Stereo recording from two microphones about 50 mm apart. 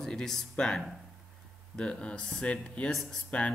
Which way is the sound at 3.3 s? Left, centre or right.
Left.